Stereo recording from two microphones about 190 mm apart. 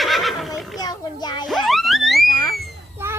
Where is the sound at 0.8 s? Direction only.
20° left (ahead or behind).